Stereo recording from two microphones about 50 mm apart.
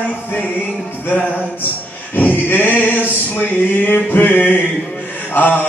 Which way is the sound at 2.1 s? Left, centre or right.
Left.